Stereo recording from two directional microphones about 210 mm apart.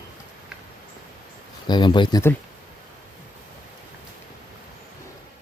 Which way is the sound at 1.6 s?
20° left (ahead or behind).